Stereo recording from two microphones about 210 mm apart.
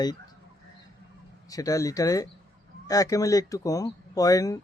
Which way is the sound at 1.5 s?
15° left (ahead or behind).